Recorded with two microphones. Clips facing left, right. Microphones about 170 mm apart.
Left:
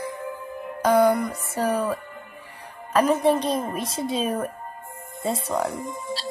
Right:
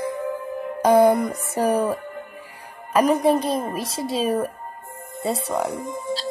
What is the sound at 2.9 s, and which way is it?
A child's voice, 15° right (ahead or behind).